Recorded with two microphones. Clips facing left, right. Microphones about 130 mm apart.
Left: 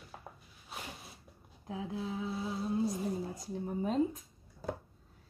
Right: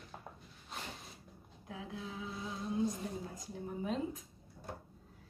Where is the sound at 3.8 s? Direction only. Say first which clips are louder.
Left 6 dB; 40° left (ahead or behind).